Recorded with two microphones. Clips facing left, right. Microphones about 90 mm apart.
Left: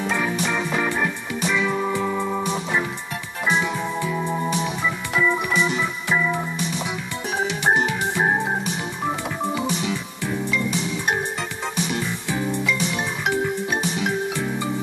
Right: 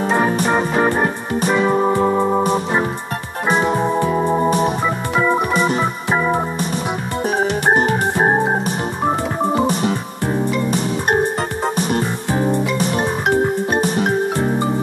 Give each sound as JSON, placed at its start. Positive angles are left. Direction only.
{"t": 0.0, "sound": "music", "side_deg": -45}
{"t": 7.2, "sound": "organ", "side_deg": -45}